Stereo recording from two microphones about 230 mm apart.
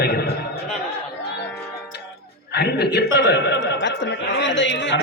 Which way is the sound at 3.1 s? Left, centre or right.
Left.